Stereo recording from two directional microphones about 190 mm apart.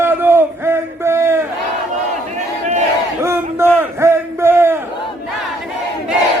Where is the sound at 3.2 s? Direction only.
15° right (ahead or behind).